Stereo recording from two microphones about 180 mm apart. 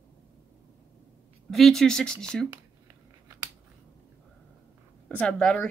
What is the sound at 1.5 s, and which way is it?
Speech, centre (ahead or behind).